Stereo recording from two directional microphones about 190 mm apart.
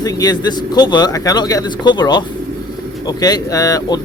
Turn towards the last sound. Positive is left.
turn(degrees=20)  # may be behind; listen again after turning